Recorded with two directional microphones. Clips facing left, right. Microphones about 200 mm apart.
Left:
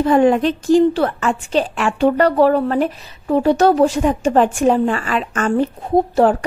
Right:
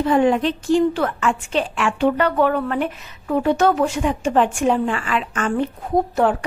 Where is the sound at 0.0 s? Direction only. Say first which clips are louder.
Left 3 dB; 45° left (ahead or behind).